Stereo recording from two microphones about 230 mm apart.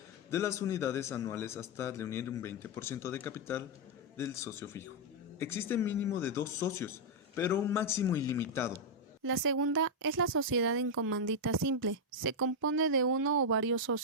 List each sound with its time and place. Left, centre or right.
0.3 s a man's voice: centre
9.2 s speech: right